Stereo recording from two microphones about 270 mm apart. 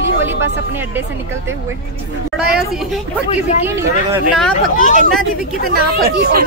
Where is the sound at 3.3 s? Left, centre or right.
Left.